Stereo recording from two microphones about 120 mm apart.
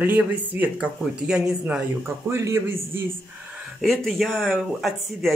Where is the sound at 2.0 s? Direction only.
20° right (ahead or behind).